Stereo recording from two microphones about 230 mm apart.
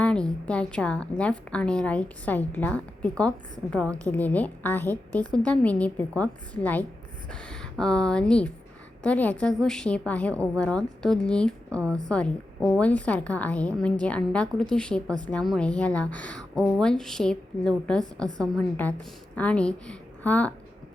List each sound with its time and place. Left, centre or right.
0.0 s a woman's voice: centre